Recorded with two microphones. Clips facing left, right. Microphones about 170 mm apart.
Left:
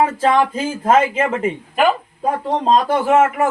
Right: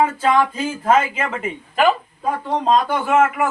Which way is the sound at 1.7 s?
20° left (ahead or behind).